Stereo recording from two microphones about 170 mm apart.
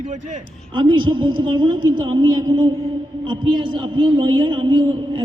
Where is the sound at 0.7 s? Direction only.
30° right (ahead or behind).